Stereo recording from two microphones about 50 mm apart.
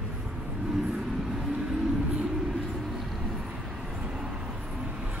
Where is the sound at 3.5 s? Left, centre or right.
Centre.